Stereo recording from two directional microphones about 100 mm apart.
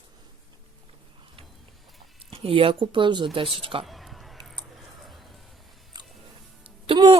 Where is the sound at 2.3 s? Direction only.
70° right (ahead or behind); by 3.2 s 50° right (ahead or behind).